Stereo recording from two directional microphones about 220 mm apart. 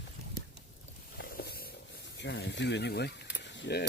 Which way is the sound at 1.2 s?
45° left (ahead or behind).